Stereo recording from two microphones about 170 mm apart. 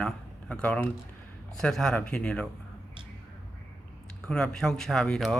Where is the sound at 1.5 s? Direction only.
5° left (ahead or behind).